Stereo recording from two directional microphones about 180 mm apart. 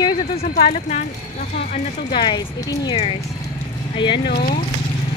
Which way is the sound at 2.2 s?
25° left (ahead or behind).